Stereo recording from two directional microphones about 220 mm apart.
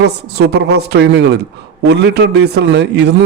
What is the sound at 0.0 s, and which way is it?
Speech, 50° right (ahead or behind).